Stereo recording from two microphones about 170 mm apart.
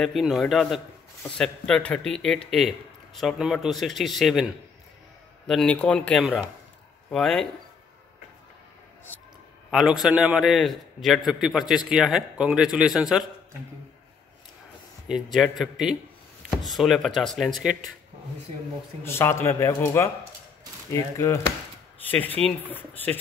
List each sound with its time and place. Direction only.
0.0 s a man's voice: centre (ahead or behind)
5.5 s a man's voice: 5° left (ahead or behind)
9.7 s a man's voice: centre (ahead or behind)
15.0 s a man's voice: centre (ahead or behind)
19.0 s a man's voice: 15° left (ahead or behind)